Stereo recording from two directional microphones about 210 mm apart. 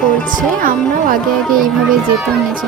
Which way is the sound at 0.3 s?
40° right (ahead or behind).